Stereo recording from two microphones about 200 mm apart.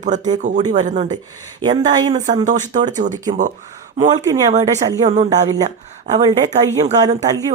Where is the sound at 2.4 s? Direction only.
40° right (ahead or behind).